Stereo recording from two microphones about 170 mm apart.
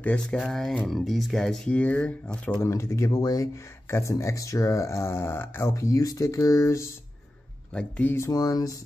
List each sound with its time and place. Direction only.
0.0 s speech: 5° left (ahead or behind)